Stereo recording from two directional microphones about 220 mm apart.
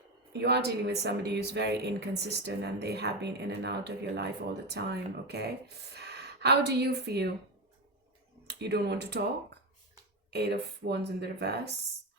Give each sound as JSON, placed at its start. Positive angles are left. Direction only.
{"t": 0.3, "sound": "a woman's voice", "side_deg": -50}
{"t": 8.4, "sound": "speech", "side_deg": -50}
{"t": 10.3, "sound": "speech", "side_deg": -50}